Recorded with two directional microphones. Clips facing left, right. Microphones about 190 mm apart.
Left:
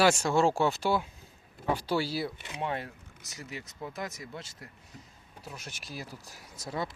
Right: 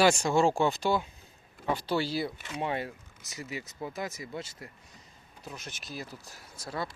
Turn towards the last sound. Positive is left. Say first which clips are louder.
# left 1 dB
turn(degrees=20)  # may be behind; listen again after turning